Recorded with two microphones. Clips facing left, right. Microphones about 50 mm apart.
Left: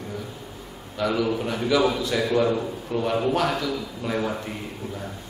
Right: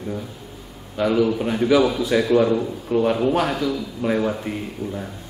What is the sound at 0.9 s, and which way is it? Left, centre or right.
Speech, centre.